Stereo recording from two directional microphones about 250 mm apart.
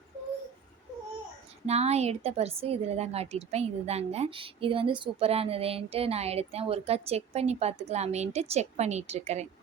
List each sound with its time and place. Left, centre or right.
1.6 s a woman's voice: right